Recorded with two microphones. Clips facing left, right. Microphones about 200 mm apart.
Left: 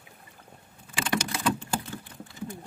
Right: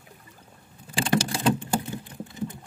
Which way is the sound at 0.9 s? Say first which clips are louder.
Right 5 dB; 30° right (ahead or behind).